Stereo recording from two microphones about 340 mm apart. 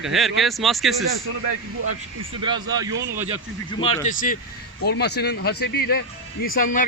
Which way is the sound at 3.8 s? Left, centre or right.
Centre.